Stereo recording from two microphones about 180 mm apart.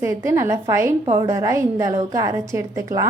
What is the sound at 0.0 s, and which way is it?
A woman's voice, 15° right (ahead or behind).